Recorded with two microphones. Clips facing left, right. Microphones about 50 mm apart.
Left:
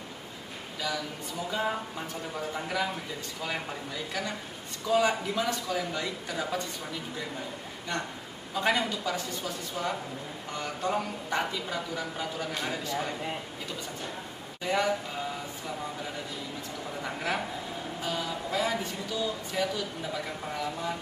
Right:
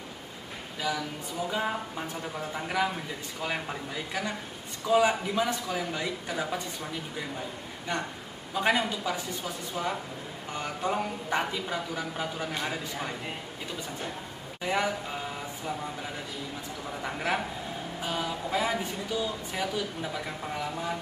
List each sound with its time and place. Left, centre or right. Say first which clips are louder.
0.7 s speech: right 2 dB; centre
14.6 s speech: even; centre
17.0 s speech: right 2 dB; centre
18.0 s speech: right 1 dB; right